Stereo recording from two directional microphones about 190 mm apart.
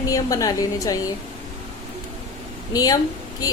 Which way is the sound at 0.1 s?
20° left (ahead or behind).